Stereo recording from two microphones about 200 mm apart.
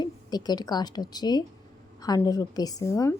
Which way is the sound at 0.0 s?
20° left (ahead or behind).